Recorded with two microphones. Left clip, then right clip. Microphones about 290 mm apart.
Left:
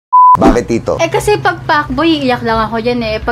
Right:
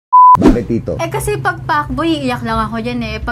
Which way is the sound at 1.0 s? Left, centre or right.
Right.